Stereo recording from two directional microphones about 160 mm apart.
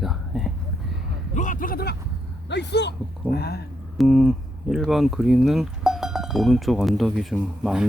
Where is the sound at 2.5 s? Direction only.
90° left.